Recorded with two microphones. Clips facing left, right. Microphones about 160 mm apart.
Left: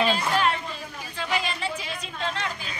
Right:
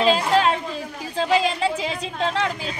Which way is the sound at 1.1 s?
90° right.